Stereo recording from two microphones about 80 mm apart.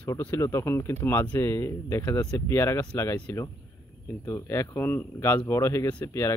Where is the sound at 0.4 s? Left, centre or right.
Left.